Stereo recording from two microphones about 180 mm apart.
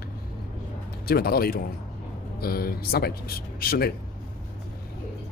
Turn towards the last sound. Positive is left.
turn(degrees=55)  # may be behind; listen again after turning